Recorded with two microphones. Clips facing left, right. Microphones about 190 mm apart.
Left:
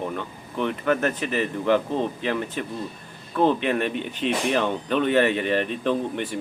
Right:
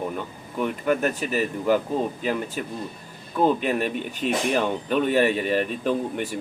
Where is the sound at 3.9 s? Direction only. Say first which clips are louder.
Even; 45° right (ahead or behind).